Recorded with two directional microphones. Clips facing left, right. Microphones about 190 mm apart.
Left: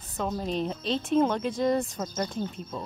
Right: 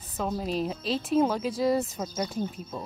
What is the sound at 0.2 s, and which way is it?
A woman's voice, 5° right (ahead or behind).